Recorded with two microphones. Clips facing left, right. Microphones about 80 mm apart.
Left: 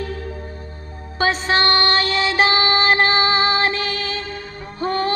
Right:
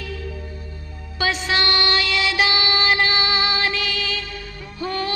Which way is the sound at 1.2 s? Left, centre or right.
Left.